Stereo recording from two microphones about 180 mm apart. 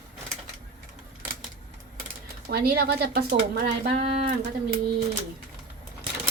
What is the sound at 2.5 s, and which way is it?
Speech, 65° right (ahead or behind).